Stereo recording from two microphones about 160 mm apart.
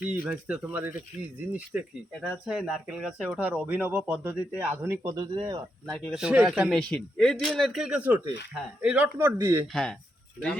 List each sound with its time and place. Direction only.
0.0 s speech: 10° right (ahead or behind)
5.1 s speech: 30° right (ahead or behind)
5.9 s speech: 5° right (ahead or behind)